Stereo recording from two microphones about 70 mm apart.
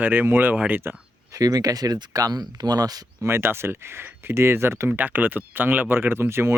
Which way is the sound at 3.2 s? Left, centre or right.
Right.